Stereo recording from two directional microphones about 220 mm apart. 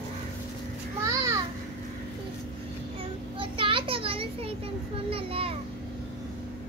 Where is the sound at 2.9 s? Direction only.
25° right (ahead or behind).